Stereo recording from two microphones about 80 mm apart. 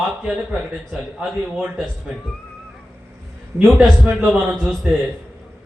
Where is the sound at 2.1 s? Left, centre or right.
Centre.